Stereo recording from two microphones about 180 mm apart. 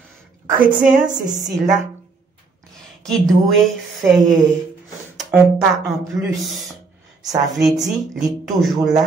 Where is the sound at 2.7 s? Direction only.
Centre (ahead or behind).